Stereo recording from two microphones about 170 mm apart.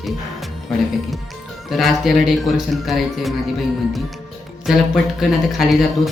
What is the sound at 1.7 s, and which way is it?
A man's voice, centre (ahead or behind).